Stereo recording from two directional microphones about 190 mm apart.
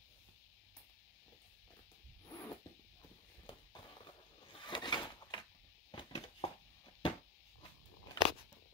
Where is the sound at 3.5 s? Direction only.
25° left (ahead or behind).